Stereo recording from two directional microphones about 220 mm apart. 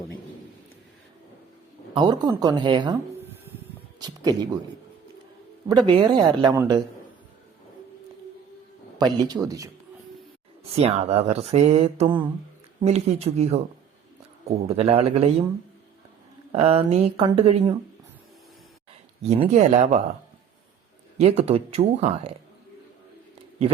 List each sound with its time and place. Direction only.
2.0 s speech: 20° right (ahead or behind)
4.0 s speech: 15° right (ahead or behind)
5.6 s speech: 20° right (ahead or behind)
9.0 s a man's voice: 20° right (ahead or behind)
10.6 s speech: 30° right (ahead or behind)
16.5 s speech: 25° right (ahead or behind)
19.2 s speech: 30° right (ahead or behind)
21.2 s speech: 30° right (ahead or behind)